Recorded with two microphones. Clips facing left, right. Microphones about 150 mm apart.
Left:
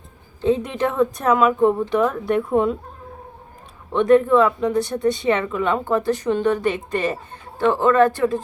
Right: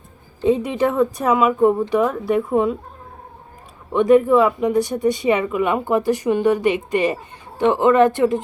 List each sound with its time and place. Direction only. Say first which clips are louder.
0.4 s speech: right 2 dB; 10° right (ahead or behind)
3.9 s speech: right 1 dB; 10° right (ahead or behind)